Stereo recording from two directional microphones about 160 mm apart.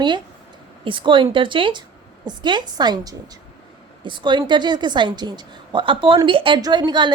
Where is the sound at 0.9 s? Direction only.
30° right (ahead or behind).